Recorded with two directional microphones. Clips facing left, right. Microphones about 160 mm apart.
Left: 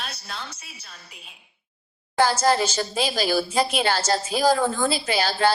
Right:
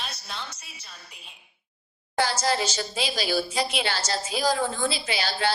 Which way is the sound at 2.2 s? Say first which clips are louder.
Left 5 dB; 50° left (ahead or behind).